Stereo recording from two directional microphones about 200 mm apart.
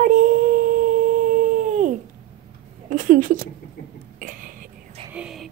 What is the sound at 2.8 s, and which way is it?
Speech, 40° right (ahead or behind).